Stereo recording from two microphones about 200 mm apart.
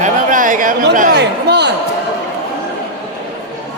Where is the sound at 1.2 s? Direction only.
60° right (ahead or behind).